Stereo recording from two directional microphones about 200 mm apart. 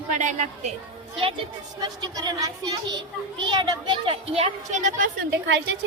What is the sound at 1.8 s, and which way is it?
A woman's voice, 20° right (ahead or behind).